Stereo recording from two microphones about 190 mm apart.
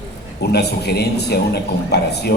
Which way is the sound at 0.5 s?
60° left (ahead or behind).